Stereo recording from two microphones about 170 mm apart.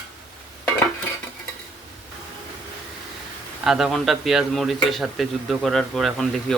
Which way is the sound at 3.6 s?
Centre (ahead or behind).